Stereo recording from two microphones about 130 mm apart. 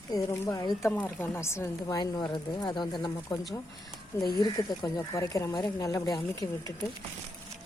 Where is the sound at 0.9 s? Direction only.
15° left (ahead or behind); by 3.1 s 35° left (ahead or behind).